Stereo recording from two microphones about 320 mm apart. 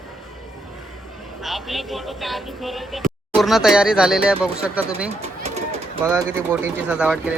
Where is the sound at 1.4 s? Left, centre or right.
Centre.